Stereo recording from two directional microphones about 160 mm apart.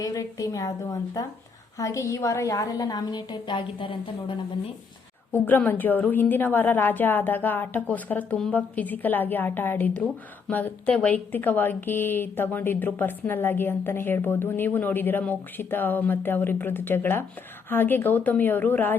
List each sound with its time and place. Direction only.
0.0 s a woman's voice: 20° left (ahead or behind)
5.3 s a woman's voice: 10° left (ahead or behind)